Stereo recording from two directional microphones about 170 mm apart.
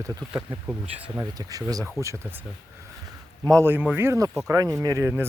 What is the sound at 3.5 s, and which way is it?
Speech, 15° right (ahead or behind).